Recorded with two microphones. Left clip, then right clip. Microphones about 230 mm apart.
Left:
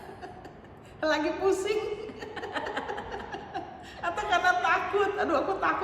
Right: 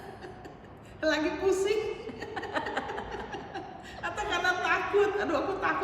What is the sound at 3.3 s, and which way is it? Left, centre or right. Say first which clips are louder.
A woman's voice: left 2 dB; centre.